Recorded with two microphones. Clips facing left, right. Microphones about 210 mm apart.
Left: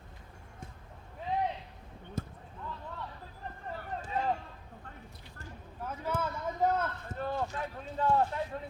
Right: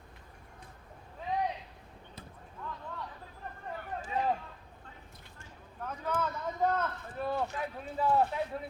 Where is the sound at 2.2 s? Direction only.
45° left (ahead or behind).